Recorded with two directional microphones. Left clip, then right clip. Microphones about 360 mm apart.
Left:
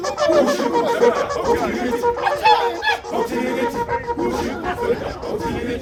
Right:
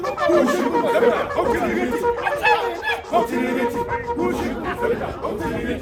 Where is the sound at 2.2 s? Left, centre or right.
Centre.